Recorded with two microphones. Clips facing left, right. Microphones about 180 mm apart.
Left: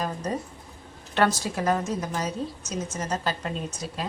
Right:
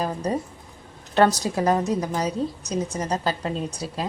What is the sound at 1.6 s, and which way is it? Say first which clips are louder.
Speech: right 3 dB; 35° right (ahead or behind).